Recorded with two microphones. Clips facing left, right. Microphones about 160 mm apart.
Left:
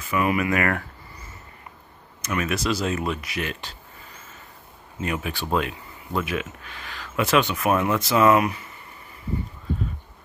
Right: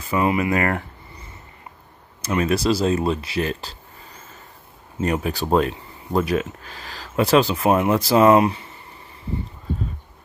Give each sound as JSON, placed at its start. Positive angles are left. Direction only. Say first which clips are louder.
{"t": 0.0, "sound": "speech", "louder": "right 3 dB", "side_deg": -30}
{"t": 2.2, "sound": "speech", "louder": "right 5 dB", "side_deg": -30}
{"t": 5.0, "sound": "speech", "louder": "right 6 dB", "side_deg": -35}